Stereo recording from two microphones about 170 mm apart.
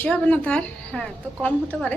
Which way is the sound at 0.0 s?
10° left (ahead or behind).